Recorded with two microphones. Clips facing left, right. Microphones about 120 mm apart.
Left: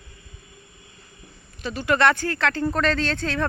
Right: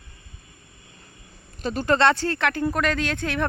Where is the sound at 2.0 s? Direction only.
25° right (ahead or behind).